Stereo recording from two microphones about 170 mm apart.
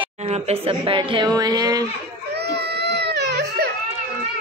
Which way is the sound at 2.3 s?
75° right (ahead or behind).